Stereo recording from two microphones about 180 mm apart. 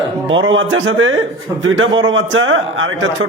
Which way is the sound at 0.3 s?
90° right.